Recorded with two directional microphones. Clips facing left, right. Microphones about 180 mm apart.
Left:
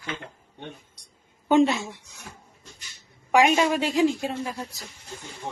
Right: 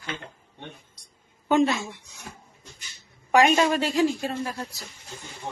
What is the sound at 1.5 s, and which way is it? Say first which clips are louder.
Speech: left 2 dB; 20° left (ahead or behind).